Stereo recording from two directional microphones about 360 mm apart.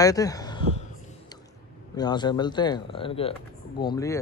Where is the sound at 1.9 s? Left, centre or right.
Centre.